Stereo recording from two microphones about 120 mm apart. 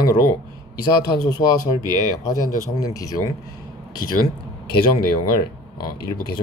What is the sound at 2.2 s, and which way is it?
Speech, 30° left (ahead or behind).